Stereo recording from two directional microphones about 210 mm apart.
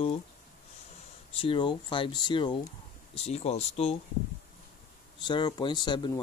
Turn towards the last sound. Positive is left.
turn(degrees=20)  # may be behind; listen again after turning